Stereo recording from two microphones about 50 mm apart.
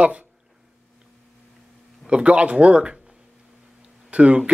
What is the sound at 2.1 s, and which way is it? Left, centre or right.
Speech, right.